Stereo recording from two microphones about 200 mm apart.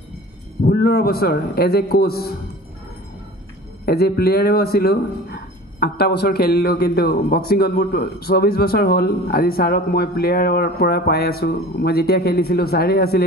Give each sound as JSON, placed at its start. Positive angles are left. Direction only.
{"t": 0.7, "sound": "a man's voice", "side_deg": 50}
{"t": 3.8, "sound": "a man's voice", "side_deg": 50}